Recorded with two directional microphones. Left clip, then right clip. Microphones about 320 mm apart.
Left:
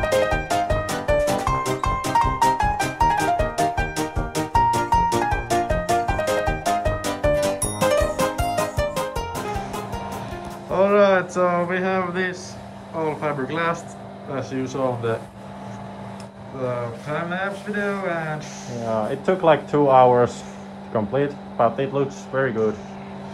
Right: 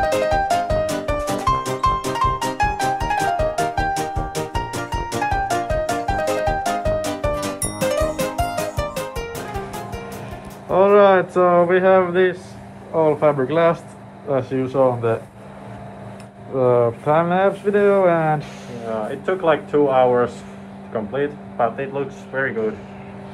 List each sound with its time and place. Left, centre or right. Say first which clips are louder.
0.0 s music: right 3 dB; centre
10.7 s speech: right 4 dB; centre
16.6 s speech: right 11 dB; centre
19.0 s speech: left 1 dB; left